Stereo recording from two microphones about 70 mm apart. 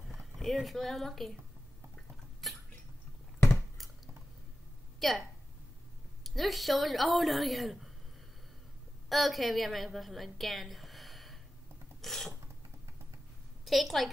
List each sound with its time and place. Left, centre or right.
0.1 s speech: centre
2.4 s a sound: centre
5.0 s a woman's voice: centre
6.2 s a woman's voice: centre
9.1 s a woman's voice: centre
12.0 s filing: centre
13.7 s a woman's voice: centre